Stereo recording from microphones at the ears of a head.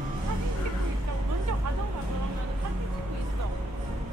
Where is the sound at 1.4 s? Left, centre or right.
Right.